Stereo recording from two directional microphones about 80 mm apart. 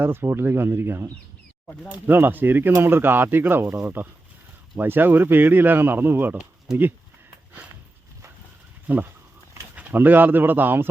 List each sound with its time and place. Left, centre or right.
0.0 s speech: right
6.3 s speech: centre
8.9 s speech: right